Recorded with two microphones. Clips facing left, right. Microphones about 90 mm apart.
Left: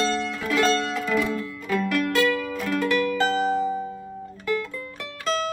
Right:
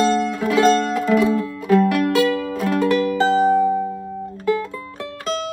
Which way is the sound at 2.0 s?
35° right (ahead or behind).